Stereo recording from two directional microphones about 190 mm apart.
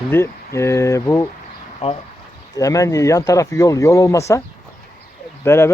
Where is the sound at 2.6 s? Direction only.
20° left (ahead or behind).